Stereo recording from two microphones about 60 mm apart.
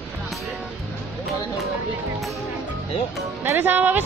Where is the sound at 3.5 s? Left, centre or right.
Right.